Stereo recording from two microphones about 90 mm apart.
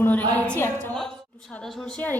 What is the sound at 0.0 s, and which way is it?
Speech, 20° left (ahead or behind).